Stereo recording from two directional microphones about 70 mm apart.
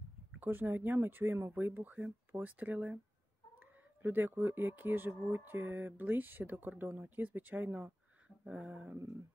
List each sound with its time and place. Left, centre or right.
0.4 s speech: right
4.0 s speech: right
8.5 s a sound: centre